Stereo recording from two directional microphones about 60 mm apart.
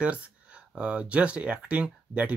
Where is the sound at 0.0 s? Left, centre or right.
Right.